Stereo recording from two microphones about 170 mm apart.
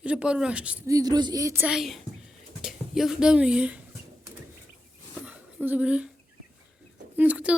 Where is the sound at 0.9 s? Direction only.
20° right (ahead or behind).